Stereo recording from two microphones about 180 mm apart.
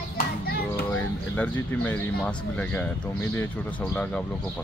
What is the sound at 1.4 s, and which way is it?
Speech, 10° left (ahead or behind).